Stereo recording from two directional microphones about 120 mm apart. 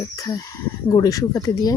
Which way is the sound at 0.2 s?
30° left (ahead or behind).